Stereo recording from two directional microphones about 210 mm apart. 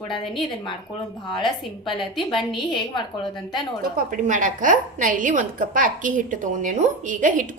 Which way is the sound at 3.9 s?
40° right (ahead or behind).